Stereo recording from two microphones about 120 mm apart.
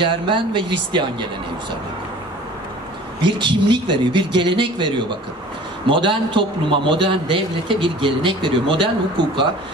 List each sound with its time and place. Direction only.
0.0 s a man's voice: 45° right (ahead or behind)
3.3 s a man's voice: 40° right (ahead or behind)